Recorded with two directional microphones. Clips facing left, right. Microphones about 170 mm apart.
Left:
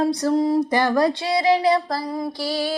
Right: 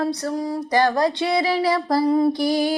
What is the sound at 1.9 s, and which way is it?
Mantra, 20° right (ahead or behind).